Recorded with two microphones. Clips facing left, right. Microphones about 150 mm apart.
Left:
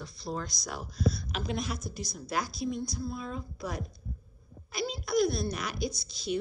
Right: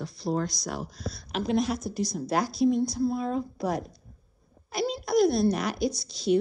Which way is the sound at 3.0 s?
35° right (ahead or behind).